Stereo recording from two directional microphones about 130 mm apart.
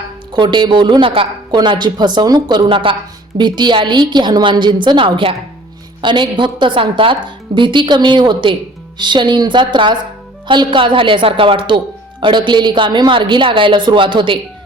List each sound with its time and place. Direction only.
0.3 s a woman's voice: 35° right (ahead or behind)